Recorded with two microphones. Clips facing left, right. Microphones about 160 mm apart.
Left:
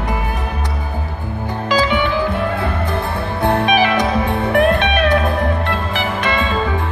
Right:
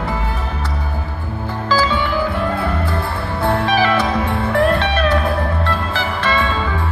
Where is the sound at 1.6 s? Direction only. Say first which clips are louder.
Left 1 dB; 20° left (ahead or behind).